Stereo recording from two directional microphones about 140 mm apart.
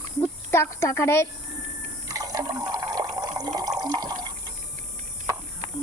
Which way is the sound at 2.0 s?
25° right (ahead or behind).